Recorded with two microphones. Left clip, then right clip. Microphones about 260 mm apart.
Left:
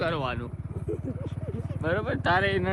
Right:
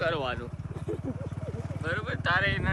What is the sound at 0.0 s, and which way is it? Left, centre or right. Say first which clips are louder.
Vehicle: even; centre.